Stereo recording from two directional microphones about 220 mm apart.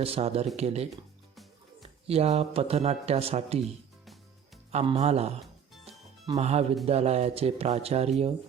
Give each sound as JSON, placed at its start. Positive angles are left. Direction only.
{"t": 0.0, "sound": "speech", "side_deg": -25}
{"t": 2.0, "sound": "speech", "side_deg": -30}
{"t": 3.6, "sound": "music", "side_deg": 0}
{"t": 4.7, "sound": "speech", "side_deg": -30}
{"t": 5.8, "sound": "music", "side_deg": -30}
{"t": 6.8, "sound": "speech", "side_deg": -30}